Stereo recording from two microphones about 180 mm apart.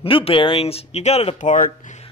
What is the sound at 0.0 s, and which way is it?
Speech, 30° left (ahead or behind).